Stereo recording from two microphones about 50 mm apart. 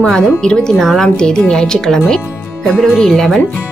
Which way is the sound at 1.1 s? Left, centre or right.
Centre.